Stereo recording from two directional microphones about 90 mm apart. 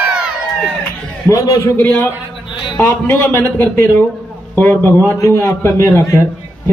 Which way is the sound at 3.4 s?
20° left (ahead or behind).